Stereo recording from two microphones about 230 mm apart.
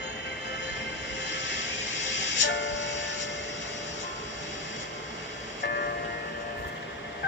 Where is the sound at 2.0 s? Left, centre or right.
Left.